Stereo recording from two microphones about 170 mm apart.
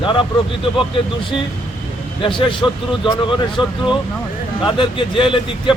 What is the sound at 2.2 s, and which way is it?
Speech, 30° left (ahead or behind).